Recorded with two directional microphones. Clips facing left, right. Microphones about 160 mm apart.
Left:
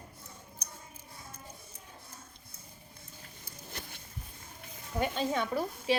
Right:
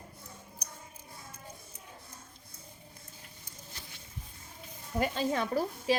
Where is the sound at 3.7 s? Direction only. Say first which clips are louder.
Left 6 dB; 55° left (ahead or behind).